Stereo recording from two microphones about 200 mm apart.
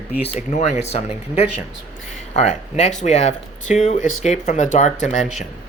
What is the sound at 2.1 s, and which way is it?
Speech, 35° left (ahead or behind).